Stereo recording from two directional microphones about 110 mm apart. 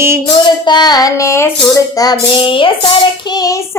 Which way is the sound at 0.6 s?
40° left (ahead or behind).